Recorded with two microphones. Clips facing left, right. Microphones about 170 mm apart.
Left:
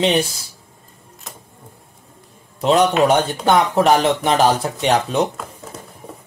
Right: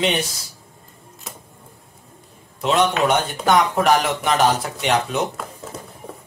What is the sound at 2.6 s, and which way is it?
Speech, 35° left (ahead or behind).